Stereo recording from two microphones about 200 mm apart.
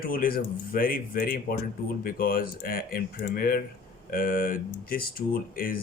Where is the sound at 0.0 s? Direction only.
45° left (ahead or behind).